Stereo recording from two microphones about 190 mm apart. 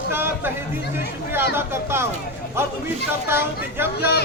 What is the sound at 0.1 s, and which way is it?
Speech, 10° right (ahead or behind).